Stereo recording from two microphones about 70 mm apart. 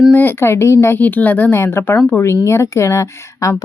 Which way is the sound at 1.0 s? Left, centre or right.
Left.